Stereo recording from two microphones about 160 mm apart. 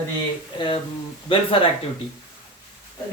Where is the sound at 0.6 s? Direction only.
30° left (ahead or behind).